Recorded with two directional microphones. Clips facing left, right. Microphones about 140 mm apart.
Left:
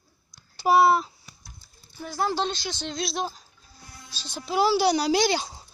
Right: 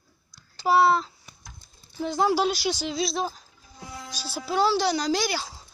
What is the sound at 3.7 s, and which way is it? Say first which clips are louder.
Music: right 10 dB; 90° right.